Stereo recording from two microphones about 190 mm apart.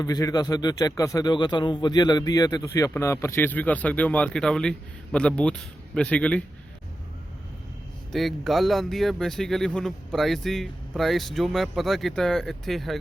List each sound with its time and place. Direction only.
0.0 s a man's voice: 20° left (ahead or behind)
8.1 s speech: centre (ahead or behind)